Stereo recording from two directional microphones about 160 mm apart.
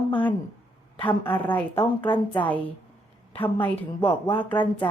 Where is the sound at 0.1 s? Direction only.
10° left (ahead or behind).